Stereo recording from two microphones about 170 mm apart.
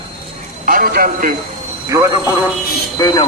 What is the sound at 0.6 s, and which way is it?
Speech, 60° right (ahead or behind).